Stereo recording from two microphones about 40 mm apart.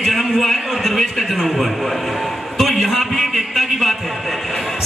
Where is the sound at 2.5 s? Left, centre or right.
Centre.